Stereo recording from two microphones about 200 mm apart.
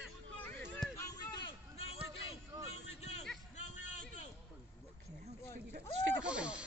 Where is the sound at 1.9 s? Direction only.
15° right (ahead or behind).